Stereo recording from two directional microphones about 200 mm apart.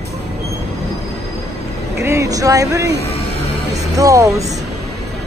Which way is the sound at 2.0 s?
15° right (ahead or behind).